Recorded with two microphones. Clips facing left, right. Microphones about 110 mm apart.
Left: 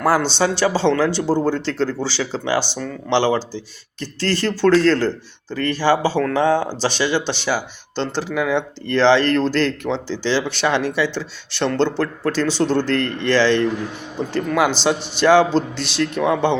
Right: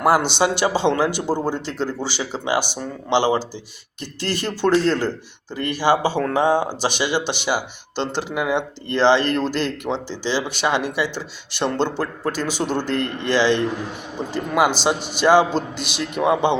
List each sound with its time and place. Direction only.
0.0 s speech: 15° right (ahead or behind)